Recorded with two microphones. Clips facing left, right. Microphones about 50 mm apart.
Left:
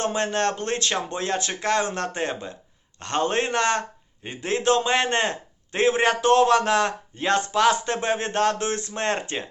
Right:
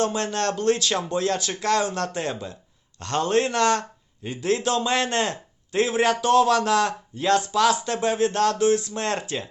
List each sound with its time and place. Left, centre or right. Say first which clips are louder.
0.0 s a man's voice: even; left